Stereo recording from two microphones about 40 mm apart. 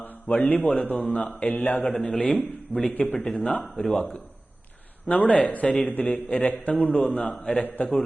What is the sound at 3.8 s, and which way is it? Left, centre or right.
Speech, left.